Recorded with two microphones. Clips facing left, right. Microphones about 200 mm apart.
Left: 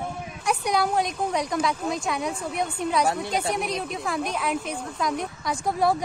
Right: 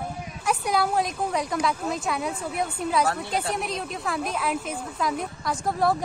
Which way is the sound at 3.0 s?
15° left (ahead or behind).